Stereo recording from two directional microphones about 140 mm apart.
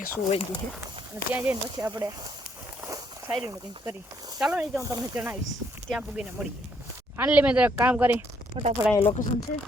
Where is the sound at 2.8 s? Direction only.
25° right (ahead or behind).